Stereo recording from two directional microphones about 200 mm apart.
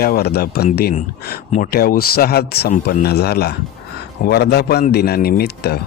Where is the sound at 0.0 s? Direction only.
50° left (ahead or behind).